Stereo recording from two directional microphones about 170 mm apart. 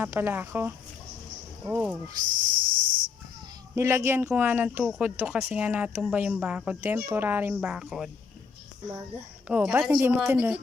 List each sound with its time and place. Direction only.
0.0 s speech: 10° right (ahead or behind)
2.2 s cricket: 50° right (ahead or behind)
3.8 s speech: 15° right (ahead or behind)
9.5 s speech: 10° right (ahead or behind)